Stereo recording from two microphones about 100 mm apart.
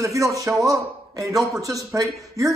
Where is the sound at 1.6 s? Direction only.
35° right (ahead or behind).